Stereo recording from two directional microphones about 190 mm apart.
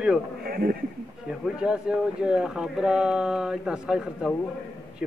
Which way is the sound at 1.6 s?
5° right (ahead or behind).